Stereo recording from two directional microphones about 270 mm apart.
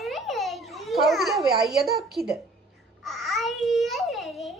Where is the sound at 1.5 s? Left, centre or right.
Centre.